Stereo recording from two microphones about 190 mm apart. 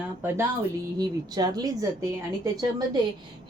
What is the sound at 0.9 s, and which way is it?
A woman's voice, 20° right (ahead or behind).